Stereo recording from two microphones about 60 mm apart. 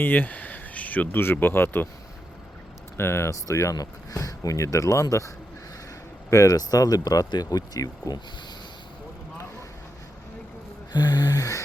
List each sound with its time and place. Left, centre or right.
0.0 s a sound: left
1.2 s speech: left
3.0 s speech: left
3.4 s speech: left
3.8 s speech: left
6.3 s speech: left
11.3 s music: left